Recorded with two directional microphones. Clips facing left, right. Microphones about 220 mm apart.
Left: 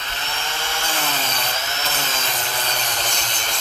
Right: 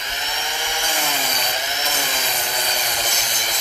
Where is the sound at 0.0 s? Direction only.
15° right (ahead or behind).